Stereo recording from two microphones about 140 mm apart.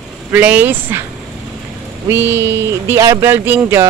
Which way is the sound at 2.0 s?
15° right (ahead or behind).